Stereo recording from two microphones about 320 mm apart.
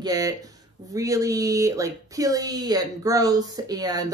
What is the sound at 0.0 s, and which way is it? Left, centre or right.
Speech, centre.